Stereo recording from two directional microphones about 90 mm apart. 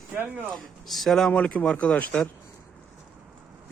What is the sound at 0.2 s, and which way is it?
Speech, 20° right (ahead or behind).